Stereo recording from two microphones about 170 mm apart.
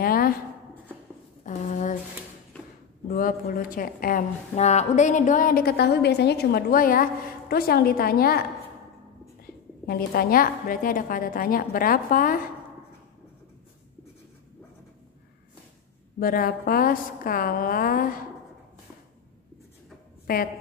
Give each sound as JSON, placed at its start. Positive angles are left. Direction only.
{"t": 0.0, "sound": "writing", "side_deg": 60}
{"t": 1.4, "sound": "a sound", "side_deg": 45}
{"t": 3.1, "sound": "a woman's voice", "side_deg": 60}
{"t": 9.8, "sound": "a woman's voice", "side_deg": 60}
{"t": 16.2, "sound": "a woman's voice", "side_deg": 55}